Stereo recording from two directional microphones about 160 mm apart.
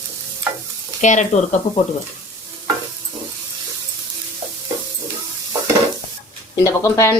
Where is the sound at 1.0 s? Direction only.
50° left (ahead or behind).